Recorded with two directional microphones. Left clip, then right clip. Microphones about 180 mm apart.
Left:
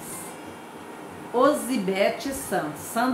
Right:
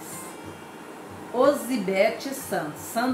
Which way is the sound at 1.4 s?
10° left (ahead or behind).